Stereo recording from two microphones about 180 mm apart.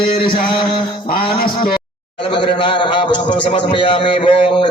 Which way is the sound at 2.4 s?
25° left (ahead or behind).